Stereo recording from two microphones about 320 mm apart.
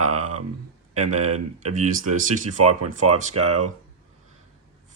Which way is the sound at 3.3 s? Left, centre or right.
Right.